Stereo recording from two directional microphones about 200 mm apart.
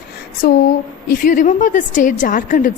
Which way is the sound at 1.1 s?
40° left (ahead or behind).